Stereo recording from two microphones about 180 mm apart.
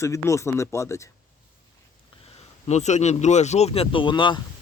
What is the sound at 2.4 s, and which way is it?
Speech, 40° left (ahead or behind).